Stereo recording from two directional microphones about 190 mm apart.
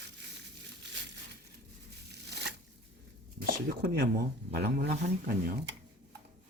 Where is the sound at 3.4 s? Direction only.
50° right (ahead or behind).